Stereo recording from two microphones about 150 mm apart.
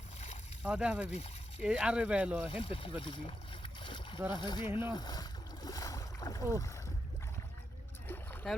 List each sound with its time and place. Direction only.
0.6 s speech: 5° right (ahead or behind)
1.1 s a sound: 45° left (ahead or behind)
1.6 s speech: 5° right (ahead or behind)
2.6 s boat: 40° left (ahead or behind)
4.3 s speech: 30° left (ahead or behind)
4.6 s speech: 15° right (ahead or behind)
4.9 s speech: 30° left (ahead or behind)
8.0 s a sound: 15° left (ahead or behind)